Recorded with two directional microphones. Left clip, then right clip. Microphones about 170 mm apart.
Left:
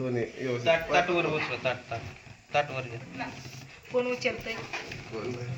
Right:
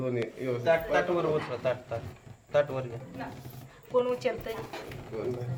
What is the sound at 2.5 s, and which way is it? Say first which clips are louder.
Speech: right 1 dB; 50° right (ahead or behind).